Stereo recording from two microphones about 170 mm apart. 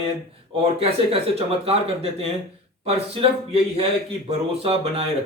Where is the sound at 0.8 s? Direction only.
35° right (ahead or behind).